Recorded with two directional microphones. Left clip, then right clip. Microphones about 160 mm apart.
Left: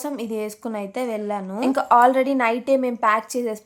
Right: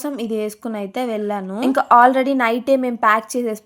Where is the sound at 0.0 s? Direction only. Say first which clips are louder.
Right 4 dB; 20° right (ahead or behind).